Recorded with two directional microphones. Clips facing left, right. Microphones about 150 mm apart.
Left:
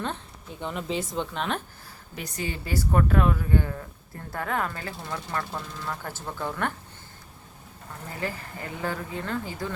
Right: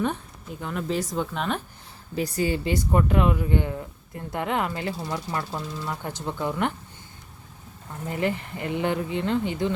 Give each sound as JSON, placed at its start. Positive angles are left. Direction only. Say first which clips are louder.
{"t": 0.6, "sound": "speech", "louder": "right 2 dB", "side_deg": 0}
{"t": 2.1, "sound": "speech", "louder": "right 9 dB", "side_deg": -35}
{"t": 2.7, "sound": "speech", "louder": "left 2 dB", "side_deg": -15}
{"t": 8.2, "sound": "speech", "louder": "right 6 dB", "side_deg": -25}